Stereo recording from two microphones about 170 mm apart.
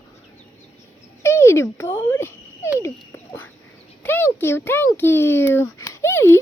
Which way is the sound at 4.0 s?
10° left (ahead or behind).